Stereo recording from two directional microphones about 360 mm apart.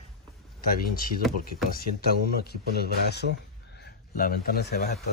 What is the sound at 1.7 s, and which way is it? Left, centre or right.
Speech, left.